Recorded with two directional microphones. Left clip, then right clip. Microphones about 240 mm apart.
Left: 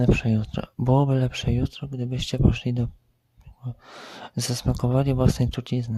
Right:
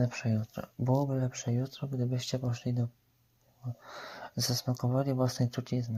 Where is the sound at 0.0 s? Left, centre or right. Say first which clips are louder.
Left 10 dB; left.